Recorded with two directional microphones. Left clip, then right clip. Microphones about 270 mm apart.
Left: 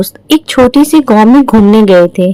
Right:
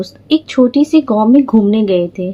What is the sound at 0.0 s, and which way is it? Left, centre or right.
A woman's voice, left.